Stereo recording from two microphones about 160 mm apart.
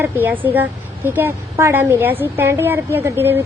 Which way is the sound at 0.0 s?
10° right (ahead or behind).